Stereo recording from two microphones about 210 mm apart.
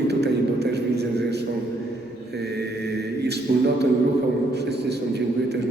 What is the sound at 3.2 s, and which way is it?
A man's voice, 50° right (ahead or behind).